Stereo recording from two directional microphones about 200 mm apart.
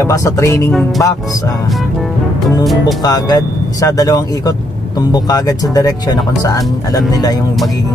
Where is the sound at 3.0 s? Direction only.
20° left (ahead or behind).